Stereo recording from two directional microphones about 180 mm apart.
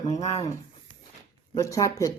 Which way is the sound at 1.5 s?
20° left (ahead or behind).